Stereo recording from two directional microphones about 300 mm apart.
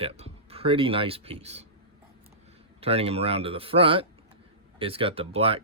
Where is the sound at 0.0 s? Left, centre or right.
Centre.